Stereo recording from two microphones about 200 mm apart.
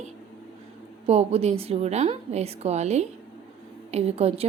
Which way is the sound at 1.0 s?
30° right (ahead or behind).